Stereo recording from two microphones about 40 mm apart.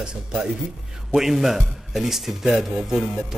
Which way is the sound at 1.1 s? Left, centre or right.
Centre.